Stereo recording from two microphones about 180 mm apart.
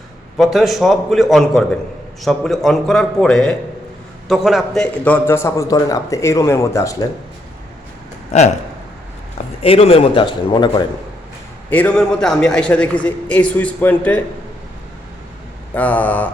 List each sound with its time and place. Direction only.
0.3 s a man's voice: centre (ahead or behind); by 6.9 s 15° left (ahead or behind)
8.3 s speech: 40° left (ahead or behind)
9.6 s a man's voice: 35° left (ahead or behind)
11.7 s a man's voice: 10° left (ahead or behind)
15.7 s a man's voice: 10° left (ahead or behind)